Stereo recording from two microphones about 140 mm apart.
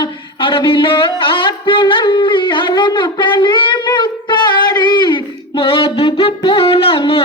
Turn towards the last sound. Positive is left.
turn(degrees=40)  # may be behind; listen again after turning